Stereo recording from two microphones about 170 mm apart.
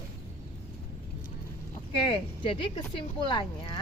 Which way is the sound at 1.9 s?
30° left (ahead or behind).